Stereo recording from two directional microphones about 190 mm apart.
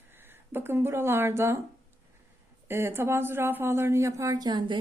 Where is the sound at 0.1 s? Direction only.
10° right (ahead or behind).